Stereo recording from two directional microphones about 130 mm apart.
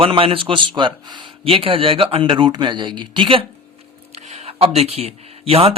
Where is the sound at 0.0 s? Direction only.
45° right (ahead or behind).